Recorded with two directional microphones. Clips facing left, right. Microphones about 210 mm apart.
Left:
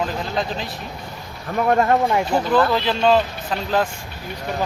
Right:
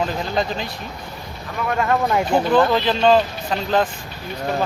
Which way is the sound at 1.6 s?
35° left (ahead or behind).